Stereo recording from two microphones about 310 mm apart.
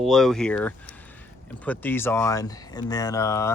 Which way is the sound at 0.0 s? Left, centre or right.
Centre.